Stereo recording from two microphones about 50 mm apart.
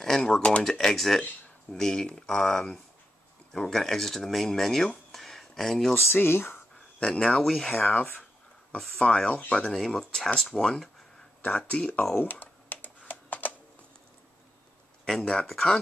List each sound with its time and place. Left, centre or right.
0.0 s speech: centre
0.7 s speech: centre
6.1 s speech: left
7.0 s speech: centre
7.7 s speech: left
9.7 s speech: centre
11.4 s speech: left
12.2 s computer keyboard: left
15.0 s speech: centre